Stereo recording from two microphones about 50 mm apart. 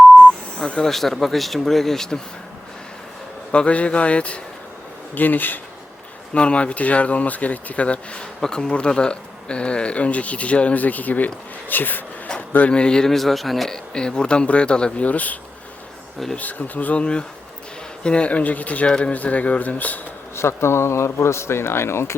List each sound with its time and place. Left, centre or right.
0.6 s speech: centre
3.5 s speech: left
5.1 s speech: left
6.3 s speech: left
12.5 s a man's voice: left; by 13.7 s centre
13.7 s speech: centre
15.0 s speech: left
16.4 s speech: left
18.9 s speech: centre
19.1 s speech: left
20.3 s speech: left